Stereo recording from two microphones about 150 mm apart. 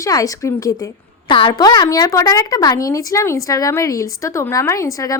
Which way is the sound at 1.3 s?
35° left (ahead or behind).